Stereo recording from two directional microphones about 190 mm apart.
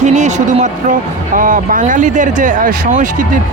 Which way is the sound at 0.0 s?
40° right (ahead or behind).